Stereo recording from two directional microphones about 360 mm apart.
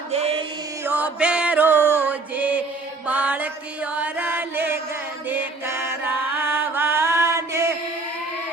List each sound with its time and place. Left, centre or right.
0.1 s music: centre
0.9 s music: centre
3.1 s chant: centre
5.3 s music: centre